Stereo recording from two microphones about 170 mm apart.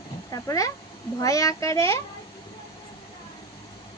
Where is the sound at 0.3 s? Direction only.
20° left (ahead or behind).